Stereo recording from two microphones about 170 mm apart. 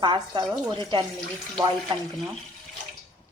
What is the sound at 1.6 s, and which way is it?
Speech, 25° right (ahead or behind).